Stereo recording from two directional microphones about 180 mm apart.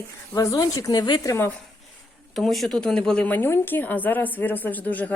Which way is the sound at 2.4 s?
Centre (ahead or behind).